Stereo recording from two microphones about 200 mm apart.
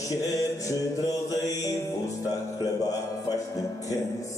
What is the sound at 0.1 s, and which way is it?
Mantra, 15° left (ahead or behind).